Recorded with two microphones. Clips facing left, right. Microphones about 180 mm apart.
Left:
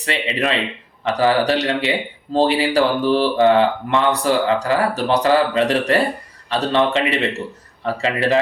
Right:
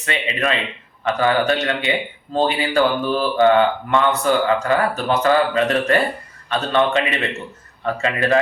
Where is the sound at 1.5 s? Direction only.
35° left (ahead or behind).